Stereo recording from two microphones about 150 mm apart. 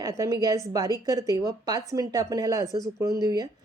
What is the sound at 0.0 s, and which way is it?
A woman's voice, 25° right (ahead or behind).